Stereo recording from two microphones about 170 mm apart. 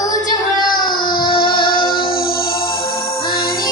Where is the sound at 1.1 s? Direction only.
60° left (ahead or behind).